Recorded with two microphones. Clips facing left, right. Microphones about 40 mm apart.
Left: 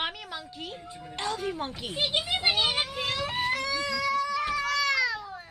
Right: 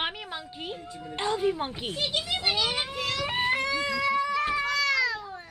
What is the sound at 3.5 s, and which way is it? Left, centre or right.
Cat, right.